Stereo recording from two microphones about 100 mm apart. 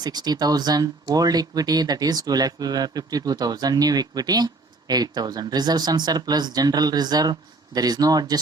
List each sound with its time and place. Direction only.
0.0 s speech: 45° right (ahead or behind)